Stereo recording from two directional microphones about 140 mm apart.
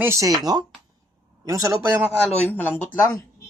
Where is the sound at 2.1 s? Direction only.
10° left (ahead or behind).